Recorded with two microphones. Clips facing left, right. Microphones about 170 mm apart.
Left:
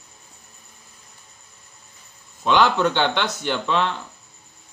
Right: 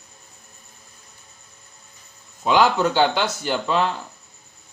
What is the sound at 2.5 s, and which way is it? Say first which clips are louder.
Speech: even; 5° right (ahead or behind).